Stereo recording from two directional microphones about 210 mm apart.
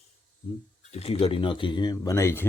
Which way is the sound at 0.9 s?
30° left (ahead or behind).